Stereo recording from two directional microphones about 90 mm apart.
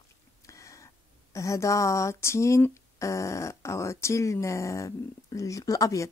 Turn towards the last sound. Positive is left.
turn(degrees=40)  # may be behind; listen again after turning